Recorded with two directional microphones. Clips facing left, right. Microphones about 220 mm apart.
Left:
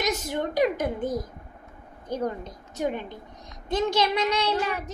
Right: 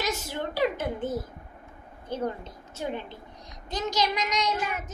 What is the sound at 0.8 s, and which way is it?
A child's voice, 15° left (ahead or behind).